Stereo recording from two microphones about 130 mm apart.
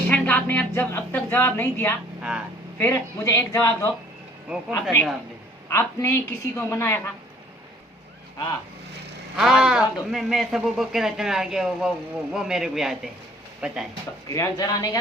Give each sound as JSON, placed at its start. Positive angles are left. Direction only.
{"t": 0.1, "sound": "a sound", "side_deg": 10}
{"t": 2.7, "sound": "a woman's voice", "side_deg": 20}
{"t": 9.3, "sound": "speech", "side_deg": -5}
{"t": 14.3, "sound": "a woman's voice", "side_deg": 25}